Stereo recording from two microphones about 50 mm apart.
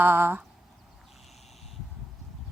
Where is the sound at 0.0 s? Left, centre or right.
Right.